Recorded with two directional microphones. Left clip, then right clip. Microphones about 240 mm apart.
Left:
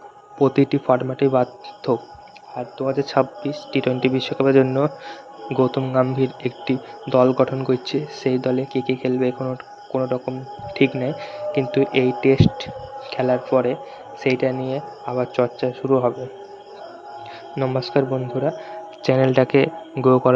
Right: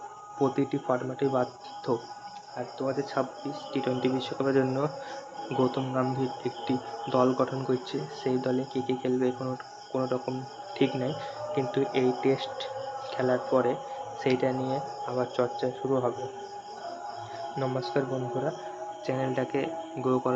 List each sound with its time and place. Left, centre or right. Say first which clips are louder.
0.3 s speech: left 10 dB; left
17.6 s speech: left 9 dB; left
19.0 s speech: left 14 dB; left